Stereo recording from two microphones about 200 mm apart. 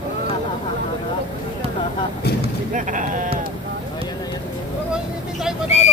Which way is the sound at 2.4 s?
40° right (ahead or behind).